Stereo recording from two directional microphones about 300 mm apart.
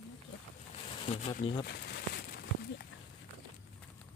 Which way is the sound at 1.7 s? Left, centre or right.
Left.